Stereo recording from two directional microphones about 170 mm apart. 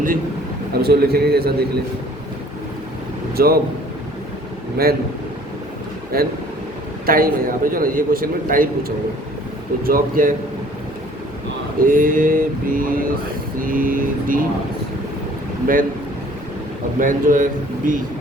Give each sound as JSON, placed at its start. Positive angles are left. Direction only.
{"t": 0.7, "sound": "a man's voice", "side_deg": -65}
{"t": 3.3, "sound": "a man's voice", "side_deg": -65}
{"t": 7.0, "sound": "a man's voice", "side_deg": -60}
{"t": 11.9, "sound": "a man's voice", "side_deg": -55}
{"t": 15.6, "sound": "a man's voice", "side_deg": -55}
{"t": 17.0, "sound": "a man's voice", "side_deg": -50}